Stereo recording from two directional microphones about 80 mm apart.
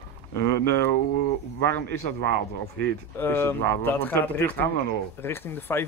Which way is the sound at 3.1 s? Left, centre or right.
Left.